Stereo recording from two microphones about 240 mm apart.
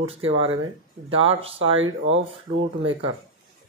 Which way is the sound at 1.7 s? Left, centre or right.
Right.